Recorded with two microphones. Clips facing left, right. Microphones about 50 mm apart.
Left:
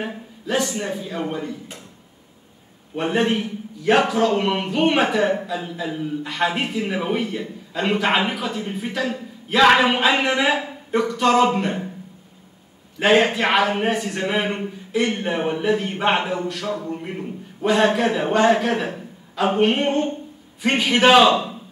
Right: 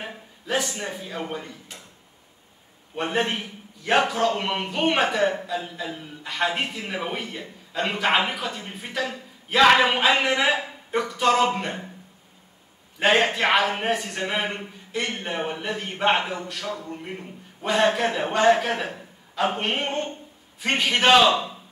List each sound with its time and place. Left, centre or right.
0.0 s a man's voice: centre
3.0 s a man's voice: centre
13.0 s a man's voice: centre
21.3 s a man's voice: left